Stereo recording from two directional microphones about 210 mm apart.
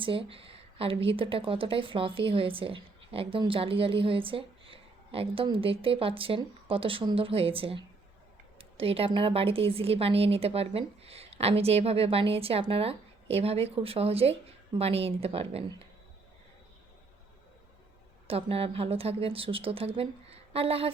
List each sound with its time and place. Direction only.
0.0 s a woman's voice: 25° right (ahead or behind)
18.3 s a woman's voice: 25° right (ahead or behind)